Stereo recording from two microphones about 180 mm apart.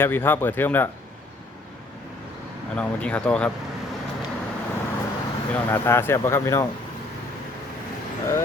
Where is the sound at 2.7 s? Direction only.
5° left (ahead or behind).